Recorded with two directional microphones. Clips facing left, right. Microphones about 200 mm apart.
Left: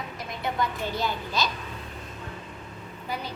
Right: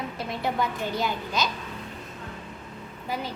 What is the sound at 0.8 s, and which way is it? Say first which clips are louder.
Speech: right 1 dB; 15° right (ahead or behind).